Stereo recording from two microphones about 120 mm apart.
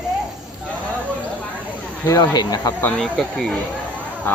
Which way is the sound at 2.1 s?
35° left (ahead or behind).